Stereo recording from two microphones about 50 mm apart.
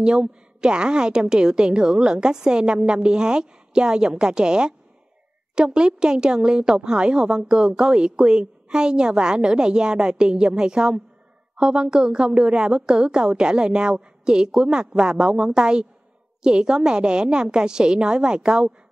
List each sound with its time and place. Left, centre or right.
0.0 s a woman's voice: centre